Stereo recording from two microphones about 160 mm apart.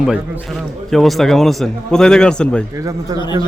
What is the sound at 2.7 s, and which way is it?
Speech, 20° right (ahead or behind).